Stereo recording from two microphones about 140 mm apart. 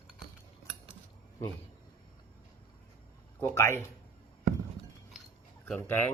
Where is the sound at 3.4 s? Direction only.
15° left (ahead or behind).